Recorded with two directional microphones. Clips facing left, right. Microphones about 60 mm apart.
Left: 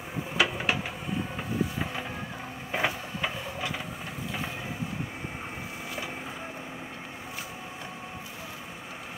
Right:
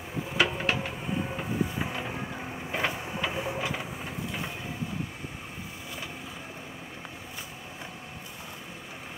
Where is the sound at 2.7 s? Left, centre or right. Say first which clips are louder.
Left 1 dB; centre.